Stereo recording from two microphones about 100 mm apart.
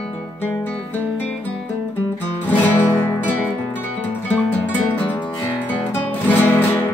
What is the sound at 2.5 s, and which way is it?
Music, 20° left (ahead or behind).